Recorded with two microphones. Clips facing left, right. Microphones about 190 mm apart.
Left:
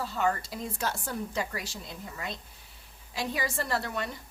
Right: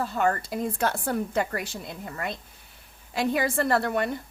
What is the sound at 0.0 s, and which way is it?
A woman's voice, 55° right (ahead or behind).